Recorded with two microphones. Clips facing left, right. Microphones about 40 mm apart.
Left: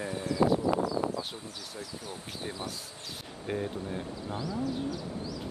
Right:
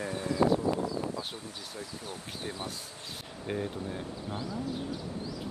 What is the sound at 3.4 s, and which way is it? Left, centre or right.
Speech, centre.